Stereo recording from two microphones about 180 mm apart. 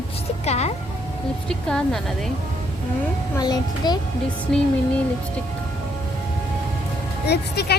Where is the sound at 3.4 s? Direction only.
20° left (ahead or behind).